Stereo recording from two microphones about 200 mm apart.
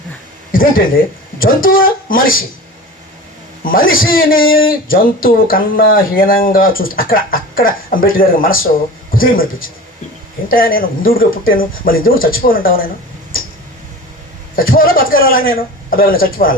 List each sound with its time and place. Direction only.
0.5 s speech: 45° left (ahead or behind)
3.6 s speech: 45° left (ahead or behind)
14.5 s speech: 45° left (ahead or behind)